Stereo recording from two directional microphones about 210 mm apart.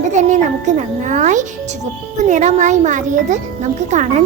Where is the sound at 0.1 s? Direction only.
35° right (ahead or behind).